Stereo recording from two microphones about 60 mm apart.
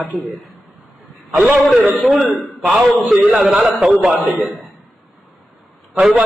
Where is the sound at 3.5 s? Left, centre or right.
Centre.